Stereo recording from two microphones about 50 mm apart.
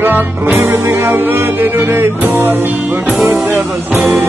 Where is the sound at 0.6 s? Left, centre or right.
Right.